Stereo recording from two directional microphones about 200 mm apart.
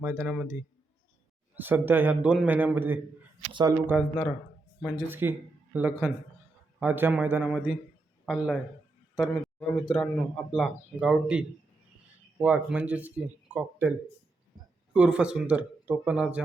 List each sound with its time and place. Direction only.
0.0 s speech: 10° right (ahead or behind)
1.5 s speech: 10° right (ahead or behind)
3.5 s speech: 20° right (ahead or behind)
3.8 s a man's voice: 5° right (ahead or behind)
14.9 s speech: 5° right (ahead or behind)